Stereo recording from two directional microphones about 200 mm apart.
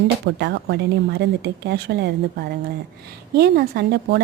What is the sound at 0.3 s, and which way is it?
Speech, 60° right (ahead or behind).